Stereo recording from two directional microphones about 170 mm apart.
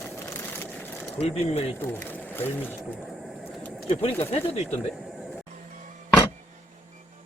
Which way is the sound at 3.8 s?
35° left (ahead or behind).